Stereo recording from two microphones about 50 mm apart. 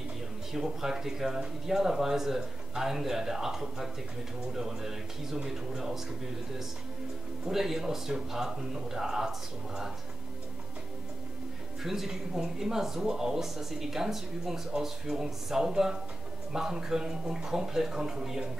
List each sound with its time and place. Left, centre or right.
0.5 s speech: centre
7.4 s speech: centre
11.8 s speech: centre